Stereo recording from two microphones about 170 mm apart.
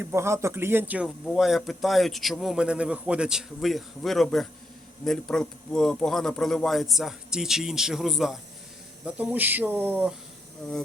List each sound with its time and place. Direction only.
0.0 s speech: 15° right (ahead or behind)